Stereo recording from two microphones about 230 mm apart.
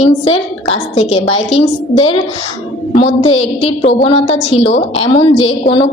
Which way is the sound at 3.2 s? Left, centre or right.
Left.